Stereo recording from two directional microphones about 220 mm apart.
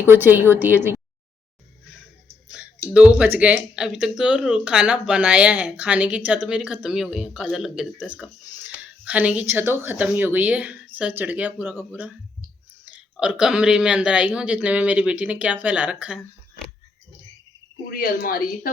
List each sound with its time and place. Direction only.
0.0 s speech: 10° right (ahead or behind)
2.9 s speech: 5° right (ahead or behind)
17.8 s speech: 45° left (ahead or behind)